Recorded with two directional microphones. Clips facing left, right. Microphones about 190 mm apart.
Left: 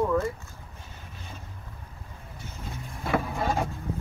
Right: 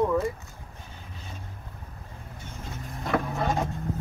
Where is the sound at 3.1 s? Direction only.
5° left (ahead or behind).